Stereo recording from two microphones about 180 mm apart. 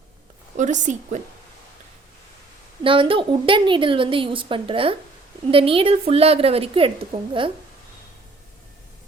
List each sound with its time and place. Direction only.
0.5 s a woman's voice: 45° right (ahead or behind)
2.8 s a woman's voice: 30° right (ahead or behind)